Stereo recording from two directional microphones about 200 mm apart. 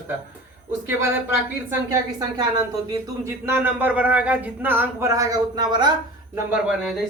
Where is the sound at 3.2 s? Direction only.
10° right (ahead or behind).